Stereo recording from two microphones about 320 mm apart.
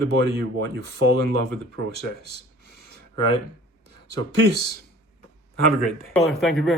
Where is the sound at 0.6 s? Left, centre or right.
Right.